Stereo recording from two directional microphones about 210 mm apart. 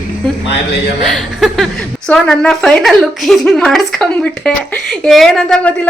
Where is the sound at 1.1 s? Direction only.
Centre (ahead or behind).